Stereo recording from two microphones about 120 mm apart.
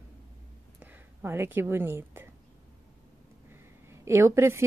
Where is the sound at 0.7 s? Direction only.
15° right (ahead or behind).